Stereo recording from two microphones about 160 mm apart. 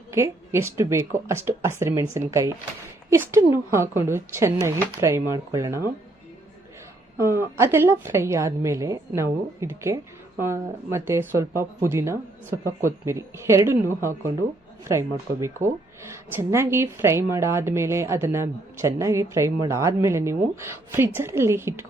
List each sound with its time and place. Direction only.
0.1 s speech: 15° right (ahead or behind)
7.2 s speech: 15° right (ahead or behind)